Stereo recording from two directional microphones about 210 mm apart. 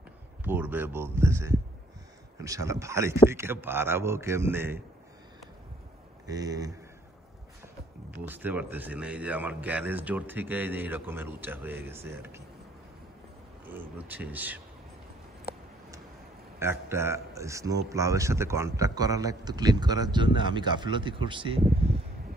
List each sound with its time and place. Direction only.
0.4 s a man's voice: 10° right (ahead or behind)
6.2 s a man's voice: 15° right (ahead or behind)
8.3 s a man's voice: 10° right (ahead or behind)
13.7 s a man's voice: 10° right (ahead or behind)
16.5 s a man's voice: 10° right (ahead or behind)